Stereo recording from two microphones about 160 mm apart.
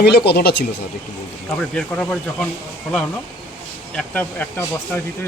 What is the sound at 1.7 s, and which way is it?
Speech, 5° left (ahead or behind).